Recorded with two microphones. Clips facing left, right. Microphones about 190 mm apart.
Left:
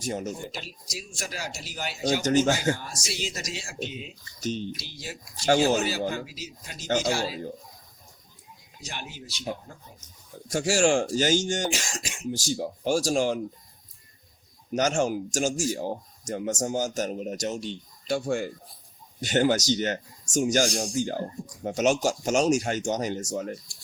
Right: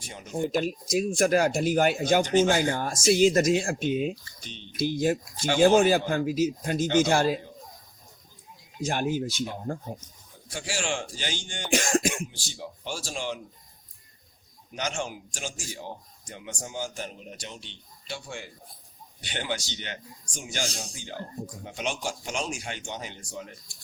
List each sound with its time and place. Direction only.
0.0 s speech: 45° left (ahead or behind)
0.5 s speech: 50° right (ahead or behind)
2.2 s speech: 45° left (ahead or behind)
2.6 s speech: 50° right (ahead or behind)
4.4 s speech: 45° left (ahead or behind)
4.8 s speech: 50° right (ahead or behind)
8.8 s speech: 50° right (ahead or behind)
10.5 s speech: 45° left (ahead or behind)
11.7 s cough: 55° right (ahead or behind)
12.3 s speech: 40° left (ahead or behind)
14.7 s speech: 45° left (ahead or behind)